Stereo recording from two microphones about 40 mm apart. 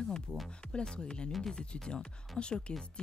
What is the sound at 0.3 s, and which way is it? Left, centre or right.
Speech, centre.